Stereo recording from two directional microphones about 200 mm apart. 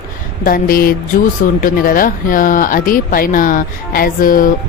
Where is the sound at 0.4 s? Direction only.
45° left (ahead or behind).